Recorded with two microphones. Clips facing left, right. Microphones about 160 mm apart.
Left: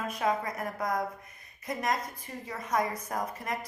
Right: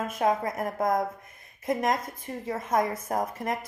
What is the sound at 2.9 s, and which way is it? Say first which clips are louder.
Speech: right 5 dB; 25° right (ahead or behind).